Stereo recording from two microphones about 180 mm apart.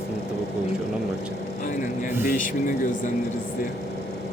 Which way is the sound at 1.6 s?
45° left (ahead or behind).